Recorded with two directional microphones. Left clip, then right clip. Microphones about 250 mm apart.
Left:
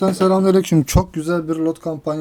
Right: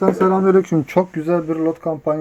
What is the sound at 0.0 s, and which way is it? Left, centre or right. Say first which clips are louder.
Speech: right 1 dB; left.